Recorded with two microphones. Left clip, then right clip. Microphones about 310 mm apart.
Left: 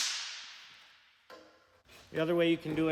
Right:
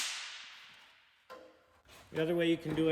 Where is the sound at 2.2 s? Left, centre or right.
Centre.